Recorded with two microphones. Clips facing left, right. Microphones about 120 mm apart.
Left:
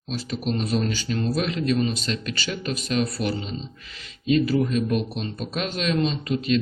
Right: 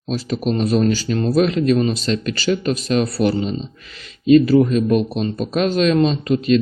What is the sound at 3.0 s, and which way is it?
Speech, 35° right (ahead or behind).